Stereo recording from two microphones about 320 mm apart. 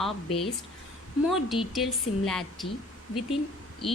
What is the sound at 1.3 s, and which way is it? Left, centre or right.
A woman's voice, centre.